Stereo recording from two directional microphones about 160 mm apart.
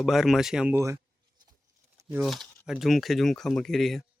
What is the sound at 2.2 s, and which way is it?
Speech, centre (ahead or behind).